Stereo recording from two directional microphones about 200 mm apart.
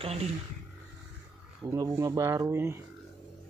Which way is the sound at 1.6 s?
15° right (ahead or behind).